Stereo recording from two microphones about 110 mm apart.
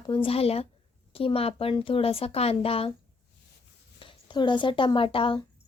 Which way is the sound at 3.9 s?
50° left (ahead or behind).